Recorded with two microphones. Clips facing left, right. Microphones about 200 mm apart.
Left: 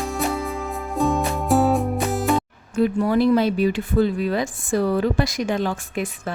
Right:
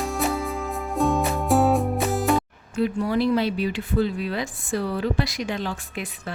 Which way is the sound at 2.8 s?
50° left (ahead or behind).